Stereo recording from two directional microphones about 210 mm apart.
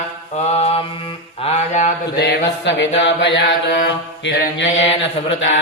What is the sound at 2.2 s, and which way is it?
Mantra, 55° left (ahead or behind).